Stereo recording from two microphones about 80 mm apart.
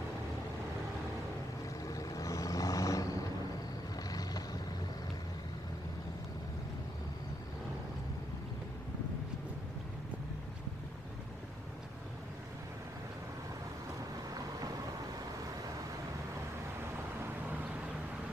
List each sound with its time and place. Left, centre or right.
1.9 s vehicle: left